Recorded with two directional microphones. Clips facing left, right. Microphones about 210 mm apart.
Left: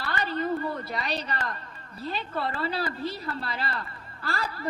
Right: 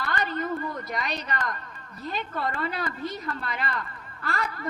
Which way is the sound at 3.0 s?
30° left (ahead or behind).